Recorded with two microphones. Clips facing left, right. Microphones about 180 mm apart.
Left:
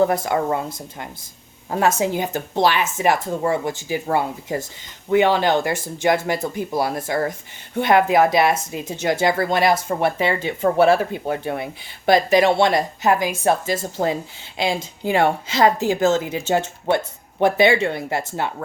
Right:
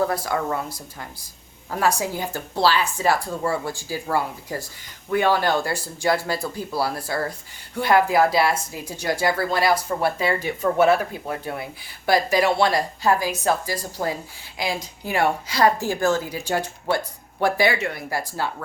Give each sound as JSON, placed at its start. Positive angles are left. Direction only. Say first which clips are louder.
{"t": 0.0, "sound": "speech", "louder": "left 5 dB", "side_deg": 20}
{"t": 1.7, "sound": "speech", "louder": "left 4 dB", "side_deg": 20}